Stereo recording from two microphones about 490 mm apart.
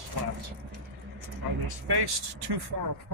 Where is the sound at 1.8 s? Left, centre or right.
Right.